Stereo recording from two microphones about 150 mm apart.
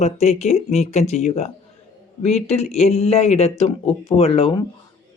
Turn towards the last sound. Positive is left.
turn(degrees=40)  # may be behind; listen again after turning